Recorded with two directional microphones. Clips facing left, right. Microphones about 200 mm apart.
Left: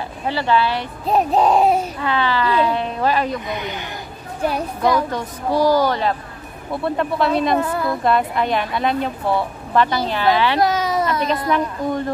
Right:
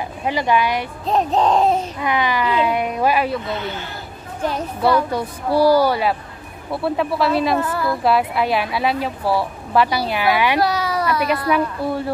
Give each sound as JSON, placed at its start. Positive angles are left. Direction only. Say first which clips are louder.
{"t": 0.2, "sound": "a woman's voice", "louder": "even", "side_deg": -15}
{"t": 1.0, "sound": "speech", "louder": "left 2 dB", "side_deg": 10}
{"t": 2.0, "sound": "a woman's voice", "louder": "even", "side_deg": -15}
{"t": 3.4, "sound": "speech", "louder": "right 1 dB", "side_deg": 15}
{"t": 5.1, "sound": "a woman's voice", "louder": "right 1 dB", "side_deg": -10}
{"t": 7.5, "sound": "a woman's voice", "louder": "left 1 dB", "side_deg": 20}
{"t": 8.0, "sound": "a woman's voice", "louder": "right 1 dB", "side_deg": -5}
{"t": 10.6, "sound": "a sound", "louder": "left 1 dB", "side_deg": 20}
{"t": 11.5, "sound": "a woman's voice", "louder": "even", "side_deg": -10}